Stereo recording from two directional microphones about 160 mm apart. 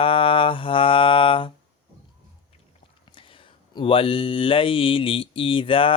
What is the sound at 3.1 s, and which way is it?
Mantra, 35° left (ahead or behind).